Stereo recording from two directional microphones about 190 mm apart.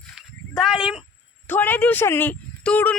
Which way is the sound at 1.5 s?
10° left (ahead or behind).